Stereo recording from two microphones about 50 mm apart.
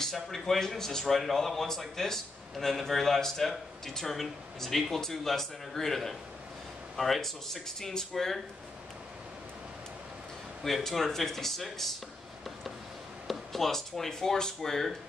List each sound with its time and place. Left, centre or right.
0.0 s speech: centre
10.6 s speech: centre
13.3 s speech: centre